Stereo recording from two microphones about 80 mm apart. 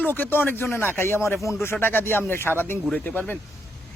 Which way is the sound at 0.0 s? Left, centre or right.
Left.